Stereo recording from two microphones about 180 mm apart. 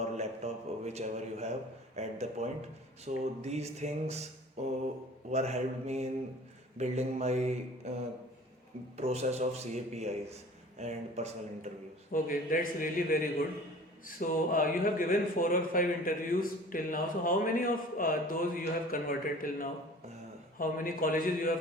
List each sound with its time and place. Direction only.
0.2 s a man's voice: 40° right (ahead or behind)
12.1 s speech: 50° left (ahead or behind)
14.2 s speech: 50° left (ahead or behind)